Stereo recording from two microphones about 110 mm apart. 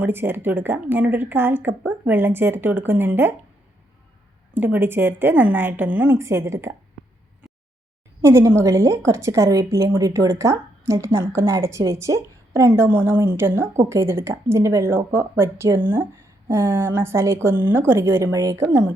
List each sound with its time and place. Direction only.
0.0 s a woman's voice: 20° right (ahead or behind)
4.5 s a woman's voice: 20° right (ahead or behind)
8.2 s a woman's voice: 25° right (ahead or behind)